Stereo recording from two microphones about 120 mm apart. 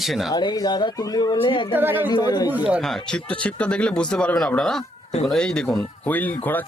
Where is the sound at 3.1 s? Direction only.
5° left (ahead or behind).